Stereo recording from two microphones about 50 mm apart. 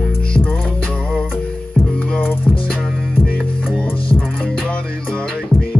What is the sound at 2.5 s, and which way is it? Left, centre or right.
Music, centre.